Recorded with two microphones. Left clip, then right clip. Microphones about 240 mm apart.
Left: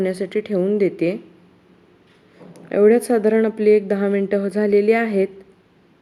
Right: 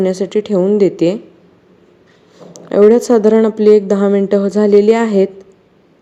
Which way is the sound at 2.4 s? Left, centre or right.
Centre.